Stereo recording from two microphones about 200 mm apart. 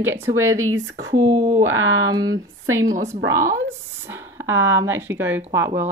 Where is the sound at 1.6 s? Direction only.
75° right (ahead or behind).